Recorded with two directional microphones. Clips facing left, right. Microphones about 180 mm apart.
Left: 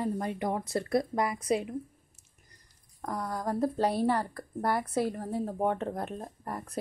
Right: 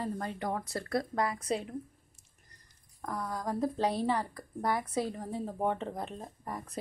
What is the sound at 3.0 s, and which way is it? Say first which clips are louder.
Speech: left 3 dB; 15° left (ahead or behind).